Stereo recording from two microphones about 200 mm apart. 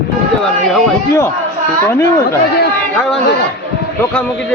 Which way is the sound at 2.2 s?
55° left (ahead or behind).